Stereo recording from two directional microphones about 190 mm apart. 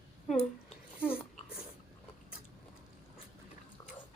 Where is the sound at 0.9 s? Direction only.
10° left (ahead or behind).